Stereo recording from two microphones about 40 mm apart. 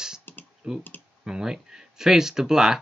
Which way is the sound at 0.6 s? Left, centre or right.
Right.